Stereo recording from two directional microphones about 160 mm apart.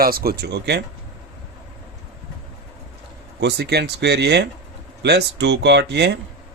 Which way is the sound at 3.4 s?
90° right.